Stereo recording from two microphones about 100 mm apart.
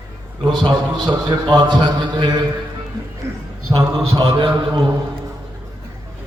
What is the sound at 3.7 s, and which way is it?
Speech, 35° right (ahead or behind).